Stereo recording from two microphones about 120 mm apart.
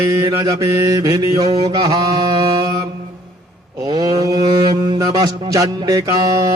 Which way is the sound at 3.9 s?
30° right (ahead or behind).